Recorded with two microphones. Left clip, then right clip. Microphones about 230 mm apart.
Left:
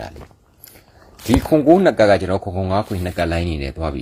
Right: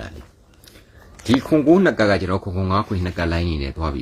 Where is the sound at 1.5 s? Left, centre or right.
Centre.